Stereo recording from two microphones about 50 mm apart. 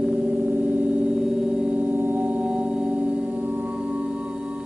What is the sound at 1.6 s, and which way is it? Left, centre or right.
Gong, right.